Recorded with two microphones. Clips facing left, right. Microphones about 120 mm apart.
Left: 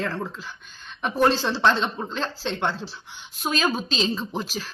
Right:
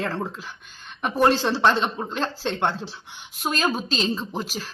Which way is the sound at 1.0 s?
10° right (ahead or behind).